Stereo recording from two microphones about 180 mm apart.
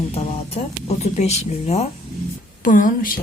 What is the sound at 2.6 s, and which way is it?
Speech, 50° left (ahead or behind).